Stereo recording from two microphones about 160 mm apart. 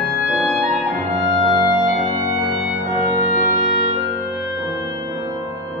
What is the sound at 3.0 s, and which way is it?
Music, 20° right (ahead or behind).